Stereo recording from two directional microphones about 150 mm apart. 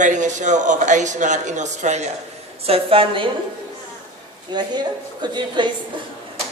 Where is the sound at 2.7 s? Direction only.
40° right (ahead or behind).